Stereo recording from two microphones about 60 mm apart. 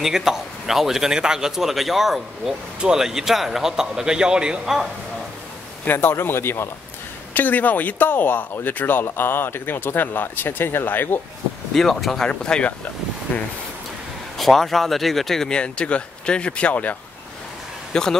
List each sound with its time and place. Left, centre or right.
0.0 s a man's voice: centre
5.9 s speech: left
7.3 s speech: left
11.7 s speech: centre
12.3 s speech: centre
13.3 s speech: left
14.4 s speech: centre; by 16.9 s left
17.9 s speech: centre